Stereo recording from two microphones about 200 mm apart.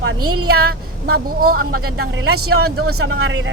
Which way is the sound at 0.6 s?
50° right (ahead or behind).